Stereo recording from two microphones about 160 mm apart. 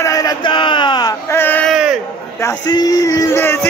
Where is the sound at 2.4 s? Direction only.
25° left (ahead or behind).